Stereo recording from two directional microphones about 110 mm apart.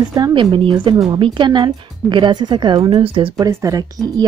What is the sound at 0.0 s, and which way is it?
Speech, 40° right (ahead or behind).